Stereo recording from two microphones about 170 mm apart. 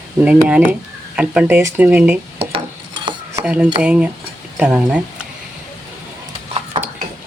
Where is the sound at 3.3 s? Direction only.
10° right (ahead or behind).